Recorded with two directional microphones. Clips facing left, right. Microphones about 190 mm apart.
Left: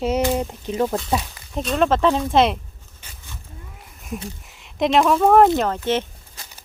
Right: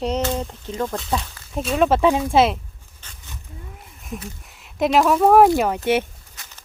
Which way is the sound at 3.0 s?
10° left (ahead or behind).